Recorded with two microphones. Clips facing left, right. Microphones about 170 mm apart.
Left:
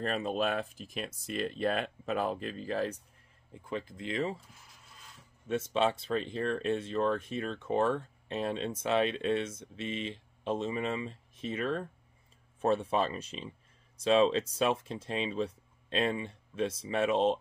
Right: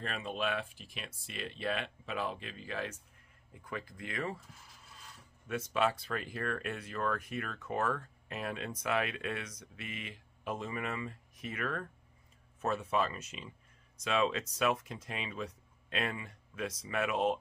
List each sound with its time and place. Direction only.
0.0 s speech: 40° left (ahead or behind)
3.5 s speech: 25° left (ahead or behind)
5.5 s speech: 25° left (ahead or behind)